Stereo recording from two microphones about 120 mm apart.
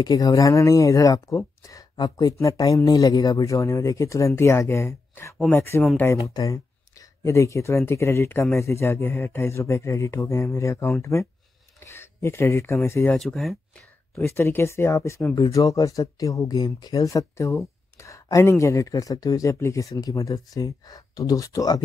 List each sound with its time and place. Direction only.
0.0 s speech: 30° left (ahead or behind)
13.1 s speech: 5° left (ahead or behind)
14.2 s speech: 20° left (ahead or behind)